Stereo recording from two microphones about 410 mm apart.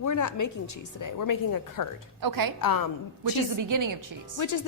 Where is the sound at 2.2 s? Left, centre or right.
Right.